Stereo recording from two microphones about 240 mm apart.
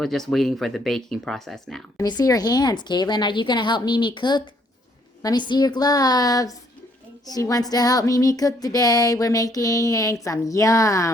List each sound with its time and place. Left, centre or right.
0.0 s speech: centre
2.0 s a woman's voice: centre